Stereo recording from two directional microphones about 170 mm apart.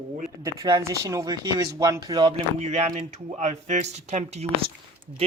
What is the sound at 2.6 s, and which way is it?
A man's voice, 40° right (ahead or behind).